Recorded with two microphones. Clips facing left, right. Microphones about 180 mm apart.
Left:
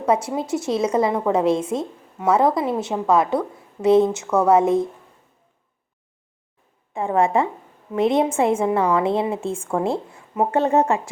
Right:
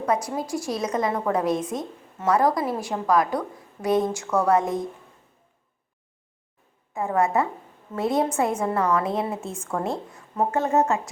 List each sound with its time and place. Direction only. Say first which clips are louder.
0.0 s a woman's voice: left 4 dB; 25° left (ahead or behind)
6.9 s a woman's voice: left 3 dB; 30° left (ahead or behind)